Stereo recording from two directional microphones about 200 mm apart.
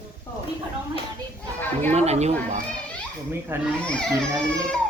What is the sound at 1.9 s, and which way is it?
Speech, 35° right (ahead or behind).